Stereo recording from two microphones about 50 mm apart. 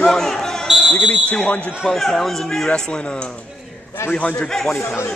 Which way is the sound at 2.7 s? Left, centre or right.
Centre.